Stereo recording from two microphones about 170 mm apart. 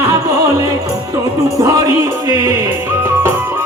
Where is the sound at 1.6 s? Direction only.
20° right (ahead or behind).